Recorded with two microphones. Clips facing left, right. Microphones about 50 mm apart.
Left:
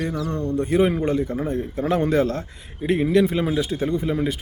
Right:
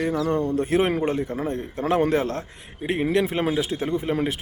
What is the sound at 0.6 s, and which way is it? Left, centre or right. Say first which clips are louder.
Speech: left 6 dB; right.